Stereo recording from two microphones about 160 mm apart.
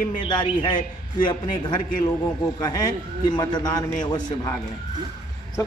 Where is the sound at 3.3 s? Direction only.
25° left (ahead or behind).